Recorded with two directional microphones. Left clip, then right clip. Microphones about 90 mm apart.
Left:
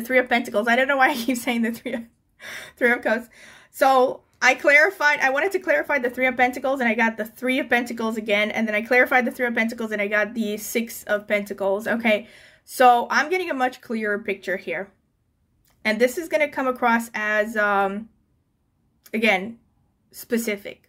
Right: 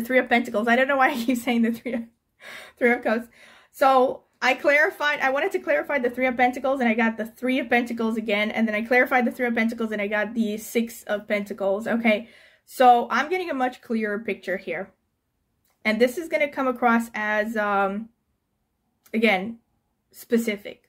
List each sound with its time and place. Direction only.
0.0 s speech: 15° left (ahead or behind)
19.0 s speech: 20° left (ahead or behind)